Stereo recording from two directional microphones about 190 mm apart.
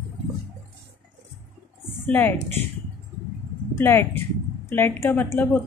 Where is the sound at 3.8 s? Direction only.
10° left (ahead or behind).